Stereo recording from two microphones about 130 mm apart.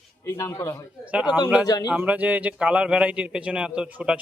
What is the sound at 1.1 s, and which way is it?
Speech, 10° right (ahead or behind).